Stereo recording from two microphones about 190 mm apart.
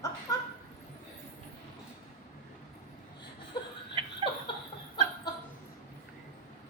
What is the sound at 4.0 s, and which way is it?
Laughter, 35° right (ahead or behind).